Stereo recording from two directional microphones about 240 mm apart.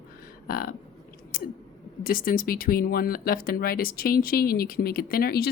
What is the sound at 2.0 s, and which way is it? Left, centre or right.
A woman's voice, left.